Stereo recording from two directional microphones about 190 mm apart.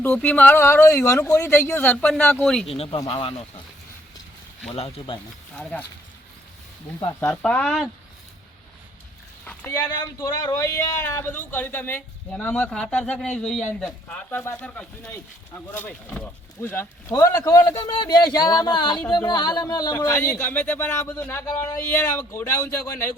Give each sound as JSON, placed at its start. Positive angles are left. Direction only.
{"t": 0.0, "sound": "speech", "side_deg": 5}
{"t": 2.7, "sound": "speech", "side_deg": 30}
{"t": 4.7, "sound": "speech", "side_deg": 25}
{"t": 7.2, "sound": "a man's voice", "side_deg": 10}
{"t": 9.4, "sound": "a man's voice", "side_deg": 10}